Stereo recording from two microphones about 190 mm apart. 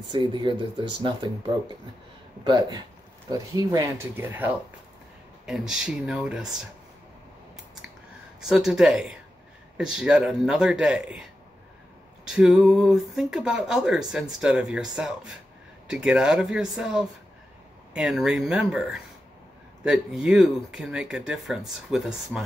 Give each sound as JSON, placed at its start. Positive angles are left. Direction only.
{"t": 0.1, "sound": "speech", "side_deg": -25}
{"t": 2.4, "sound": "speech", "side_deg": -20}
{"t": 5.5, "sound": "speech", "side_deg": -5}
{"t": 8.4, "sound": "speech", "side_deg": 0}
{"t": 12.3, "sound": "speech", "side_deg": -5}